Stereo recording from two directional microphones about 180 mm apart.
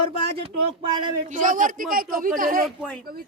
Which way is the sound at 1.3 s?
45° right (ahead or behind).